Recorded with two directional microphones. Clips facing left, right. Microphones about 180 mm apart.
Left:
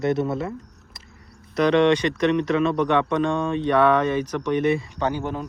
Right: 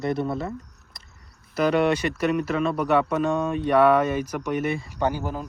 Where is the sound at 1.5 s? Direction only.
5° right (ahead or behind).